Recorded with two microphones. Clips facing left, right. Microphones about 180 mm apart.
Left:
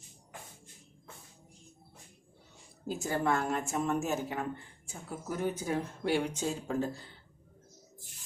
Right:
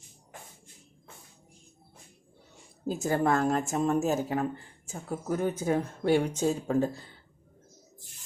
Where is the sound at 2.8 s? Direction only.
45° right (ahead or behind).